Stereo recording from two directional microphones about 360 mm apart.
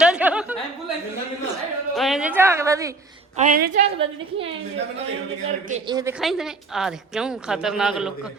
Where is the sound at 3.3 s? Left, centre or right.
Right.